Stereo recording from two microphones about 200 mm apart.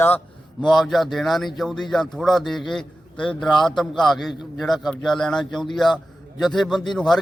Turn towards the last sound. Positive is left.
turn(degrees=0)  # may be behind; listen again after turning